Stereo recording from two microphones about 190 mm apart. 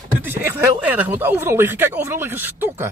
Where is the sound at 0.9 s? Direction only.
10° right (ahead or behind).